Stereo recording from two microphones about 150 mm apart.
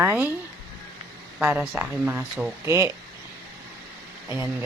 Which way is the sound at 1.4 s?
10° right (ahead or behind).